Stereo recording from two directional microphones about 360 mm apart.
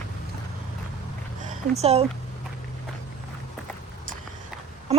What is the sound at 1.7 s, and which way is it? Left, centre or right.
Speech, centre.